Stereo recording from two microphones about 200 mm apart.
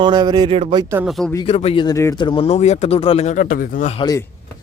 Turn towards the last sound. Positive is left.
turn(degrees=20)  # may be behind; listen again after turning